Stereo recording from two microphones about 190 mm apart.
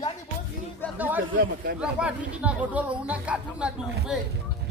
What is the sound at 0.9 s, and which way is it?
Speech, 10° right (ahead or behind).